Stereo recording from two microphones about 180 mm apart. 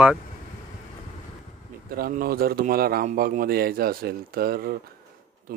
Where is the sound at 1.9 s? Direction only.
55° right (ahead or behind).